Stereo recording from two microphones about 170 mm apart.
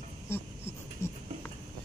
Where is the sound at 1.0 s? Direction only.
15° left (ahead or behind).